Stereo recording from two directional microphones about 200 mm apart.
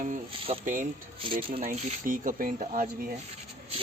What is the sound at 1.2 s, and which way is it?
Speech, 25° right (ahead or behind).